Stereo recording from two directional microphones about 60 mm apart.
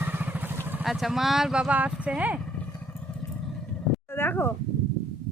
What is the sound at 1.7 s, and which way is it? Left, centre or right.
Speech, right.